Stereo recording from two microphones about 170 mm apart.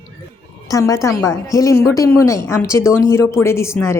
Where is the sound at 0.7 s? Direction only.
20° left (ahead or behind).